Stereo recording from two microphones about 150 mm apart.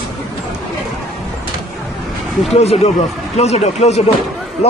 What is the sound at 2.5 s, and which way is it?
Speech, 45° left (ahead or behind).